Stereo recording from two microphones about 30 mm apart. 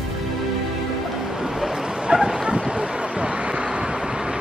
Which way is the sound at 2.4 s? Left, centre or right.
Right.